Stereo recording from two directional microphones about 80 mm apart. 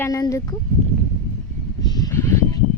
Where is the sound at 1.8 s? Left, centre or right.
Left.